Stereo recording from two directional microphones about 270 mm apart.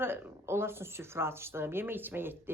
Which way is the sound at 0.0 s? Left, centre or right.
Centre.